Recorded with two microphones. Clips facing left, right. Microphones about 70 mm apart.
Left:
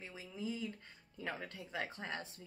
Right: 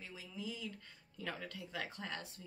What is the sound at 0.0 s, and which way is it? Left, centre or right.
A woman's voice, left.